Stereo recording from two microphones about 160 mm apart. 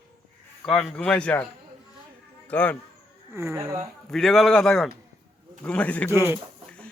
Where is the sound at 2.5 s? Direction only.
10° left (ahead or behind).